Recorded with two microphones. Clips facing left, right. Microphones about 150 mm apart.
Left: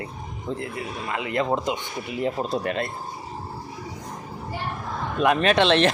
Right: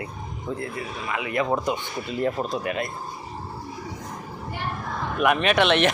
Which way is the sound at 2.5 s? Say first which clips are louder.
Left 1 dB; 35° left (ahead or behind).